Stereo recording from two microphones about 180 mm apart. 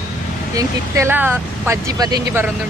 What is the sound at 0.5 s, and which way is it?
Speech, 15° right (ahead or behind).